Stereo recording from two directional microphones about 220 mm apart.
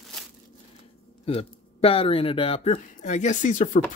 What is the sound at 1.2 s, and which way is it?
Speech, 25° left (ahead or behind).